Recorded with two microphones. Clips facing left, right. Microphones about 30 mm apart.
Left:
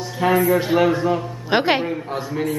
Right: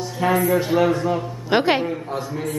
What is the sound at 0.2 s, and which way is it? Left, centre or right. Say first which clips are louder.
A man's voice: left 2 dB; centre.